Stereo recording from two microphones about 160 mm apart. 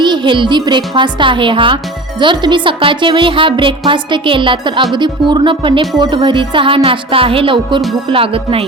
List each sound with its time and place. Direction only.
0.0 s speech: 30° right (ahead or behind)